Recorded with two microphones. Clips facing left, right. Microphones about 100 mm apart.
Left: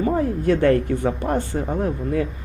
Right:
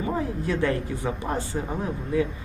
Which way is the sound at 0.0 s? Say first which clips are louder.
Left 7 dB; 50° left (ahead or behind).